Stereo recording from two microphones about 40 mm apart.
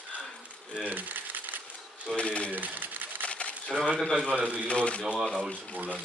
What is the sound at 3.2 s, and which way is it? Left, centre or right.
Camera, left.